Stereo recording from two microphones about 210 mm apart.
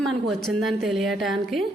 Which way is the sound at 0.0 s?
Centre (ahead or behind).